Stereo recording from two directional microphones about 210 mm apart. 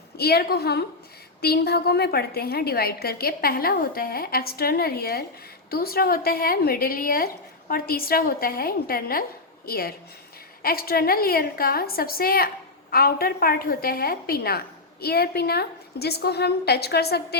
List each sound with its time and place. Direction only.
0.2 s a woman's voice: 50° left (ahead or behind)